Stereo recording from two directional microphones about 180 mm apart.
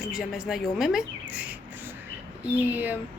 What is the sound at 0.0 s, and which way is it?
Speech, centre (ahead or behind).